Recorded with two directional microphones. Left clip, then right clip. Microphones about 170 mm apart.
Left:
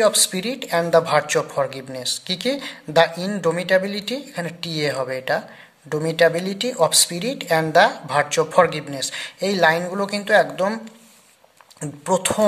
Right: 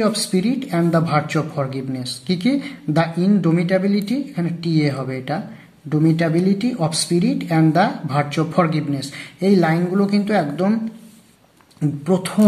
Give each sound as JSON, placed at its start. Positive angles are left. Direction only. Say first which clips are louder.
{"t": 0.0, "sound": "speech", "louder": "left 2 dB", "side_deg": 40}